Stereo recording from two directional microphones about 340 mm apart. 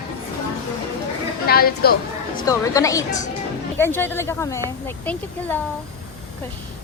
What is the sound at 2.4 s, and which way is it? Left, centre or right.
Speech, centre.